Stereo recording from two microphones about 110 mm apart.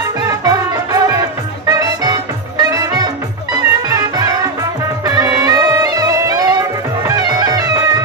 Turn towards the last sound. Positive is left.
turn(degrees=-35)  # may be behind; listen again after turning